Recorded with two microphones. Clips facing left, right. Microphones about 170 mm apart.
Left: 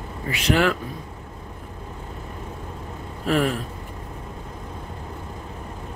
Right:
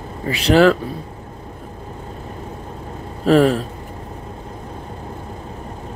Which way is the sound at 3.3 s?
30° right (ahead or behind).